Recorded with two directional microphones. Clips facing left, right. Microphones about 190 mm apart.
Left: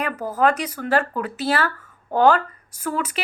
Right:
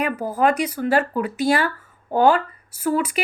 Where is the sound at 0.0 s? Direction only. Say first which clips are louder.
Right 1 dB; 10° right (ahead or behind).